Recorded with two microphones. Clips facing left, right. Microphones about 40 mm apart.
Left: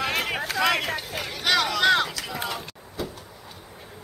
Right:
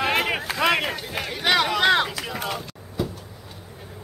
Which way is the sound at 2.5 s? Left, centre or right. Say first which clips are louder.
Right 2 dB; centre.